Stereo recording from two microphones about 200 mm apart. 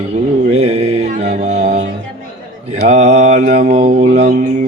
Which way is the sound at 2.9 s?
35° right (ahead or behind).